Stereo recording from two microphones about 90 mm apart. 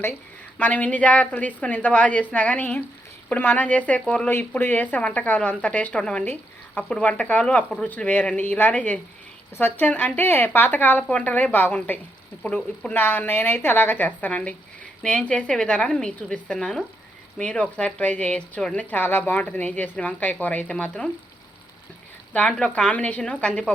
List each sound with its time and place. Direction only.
0.6 s speech: 15° left (ahead or behind)
4.3 s a woman's voice: 25° left (ahead or behind)
22.3 s speech: 10° left (ahead or behind)